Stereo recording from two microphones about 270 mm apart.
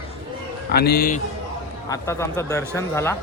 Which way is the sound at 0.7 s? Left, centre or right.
Left.